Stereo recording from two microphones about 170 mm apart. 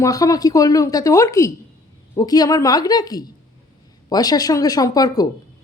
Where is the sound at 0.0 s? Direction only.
20° left (ahead or behind).